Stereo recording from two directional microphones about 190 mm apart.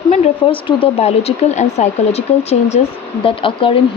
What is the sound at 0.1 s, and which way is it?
Speech, 30° left (ahead or behind).